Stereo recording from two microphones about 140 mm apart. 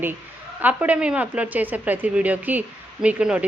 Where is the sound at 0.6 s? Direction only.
10° right (ahead or behind).